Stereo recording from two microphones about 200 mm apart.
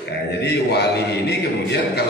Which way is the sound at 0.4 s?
55° left (ahead or behind).